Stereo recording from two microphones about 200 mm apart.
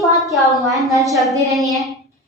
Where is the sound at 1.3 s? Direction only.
15° right (ahead or behind).